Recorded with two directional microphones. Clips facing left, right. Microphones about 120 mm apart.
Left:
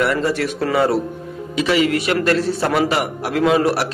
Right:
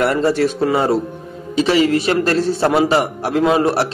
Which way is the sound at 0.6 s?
20° right (ahead or behind).